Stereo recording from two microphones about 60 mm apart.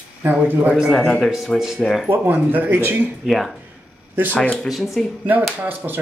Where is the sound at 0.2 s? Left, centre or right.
Right.